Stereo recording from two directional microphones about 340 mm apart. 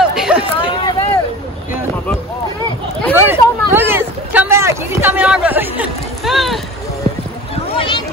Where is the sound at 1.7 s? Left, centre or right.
Centre.